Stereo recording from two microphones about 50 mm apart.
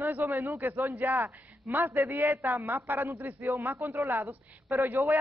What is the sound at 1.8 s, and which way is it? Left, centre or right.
A woman's voice, right.